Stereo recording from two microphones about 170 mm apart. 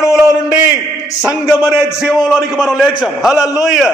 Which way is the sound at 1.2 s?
5° right (ahead or behind).